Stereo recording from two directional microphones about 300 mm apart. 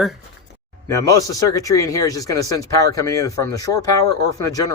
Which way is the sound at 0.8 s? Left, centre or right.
Centre.